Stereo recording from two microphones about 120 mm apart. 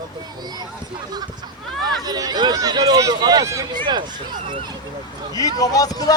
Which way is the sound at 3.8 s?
40° right (ahead or behind).